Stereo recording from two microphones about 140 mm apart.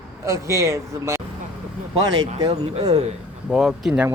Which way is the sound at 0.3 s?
20° right (ahead or behind).